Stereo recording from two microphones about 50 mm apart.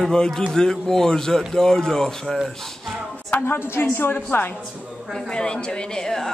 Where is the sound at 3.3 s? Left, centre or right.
Left.